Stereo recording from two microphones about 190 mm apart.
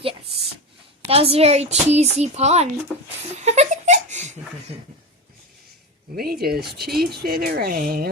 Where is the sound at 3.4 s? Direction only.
35° right (ahead or behind).